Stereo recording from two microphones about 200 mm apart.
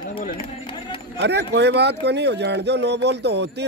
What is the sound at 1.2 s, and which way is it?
Speech, 60° right (ahead or behind).